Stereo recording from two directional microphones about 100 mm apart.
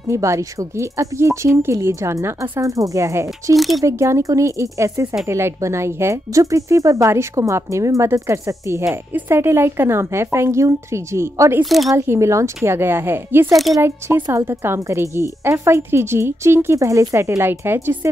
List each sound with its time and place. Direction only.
0.1 s speech: 30° right (ahead or behind)
2.6 s speech: 35° right (ahead or behind)
3.5 s speech: centre (ahead or behind)
3.8 s speech: 30° right (ahead or behind)
11.6 s speech: centre (ahead or behind)
12.1 s speech: 30° right (ahead or behind)